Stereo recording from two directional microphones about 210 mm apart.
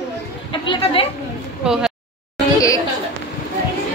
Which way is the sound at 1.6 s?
5° right (ahead or behind).